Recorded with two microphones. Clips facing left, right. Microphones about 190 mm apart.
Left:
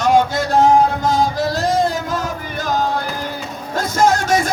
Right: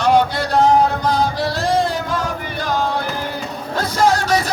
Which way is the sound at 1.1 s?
45° left (ahead or behind).